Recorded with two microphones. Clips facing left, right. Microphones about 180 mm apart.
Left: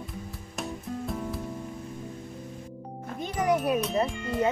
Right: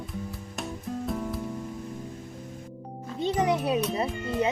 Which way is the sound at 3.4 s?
20° right (ahead or behind).